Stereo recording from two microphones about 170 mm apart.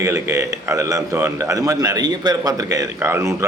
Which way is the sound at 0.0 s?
15° right (ahead or behind).